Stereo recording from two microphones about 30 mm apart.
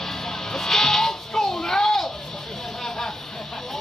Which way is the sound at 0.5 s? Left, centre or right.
Centre.